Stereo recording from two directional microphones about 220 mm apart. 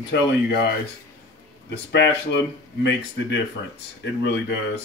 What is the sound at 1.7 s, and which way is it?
Speech, 50° left (ahead or behind).